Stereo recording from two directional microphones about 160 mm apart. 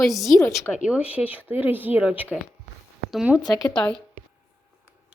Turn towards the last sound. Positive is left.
turn(degrees=5)  # may be behind; listen again after turning